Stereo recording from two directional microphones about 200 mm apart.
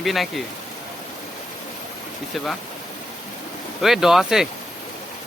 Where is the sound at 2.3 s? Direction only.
Centre (ahead or behind).